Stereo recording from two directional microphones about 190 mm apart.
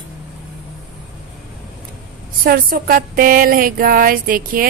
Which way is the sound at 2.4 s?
50° right (ahead or behind).